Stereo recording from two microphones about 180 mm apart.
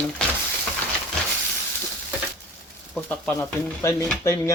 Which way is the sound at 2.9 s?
5° left (ahead or behind).